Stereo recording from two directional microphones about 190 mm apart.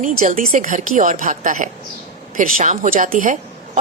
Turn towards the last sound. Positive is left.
turn(degrees=-40)  # may be behind; listen again after turning